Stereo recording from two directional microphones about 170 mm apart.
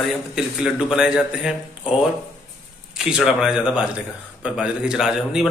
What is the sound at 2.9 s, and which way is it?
A man's voice, 5° right (ahead or behind).